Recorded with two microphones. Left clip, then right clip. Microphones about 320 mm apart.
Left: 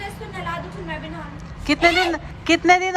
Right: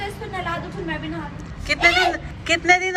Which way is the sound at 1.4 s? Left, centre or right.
Centre.